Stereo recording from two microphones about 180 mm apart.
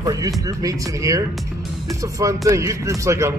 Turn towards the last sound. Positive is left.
turn(degrees=-15)  # may be behind; listen again after turning